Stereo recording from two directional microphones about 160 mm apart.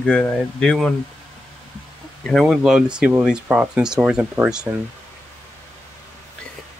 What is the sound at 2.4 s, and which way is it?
Speech, 5° right (ahead or behind).